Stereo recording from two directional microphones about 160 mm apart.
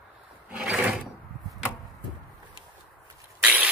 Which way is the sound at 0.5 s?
5° right (ahead or behind).